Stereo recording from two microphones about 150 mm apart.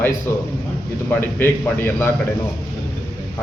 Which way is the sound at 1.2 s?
15° left (ahead or behind).